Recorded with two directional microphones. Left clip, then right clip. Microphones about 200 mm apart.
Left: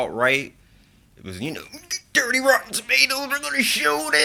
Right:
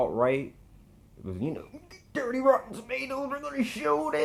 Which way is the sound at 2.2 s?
25° left (ahead or behind).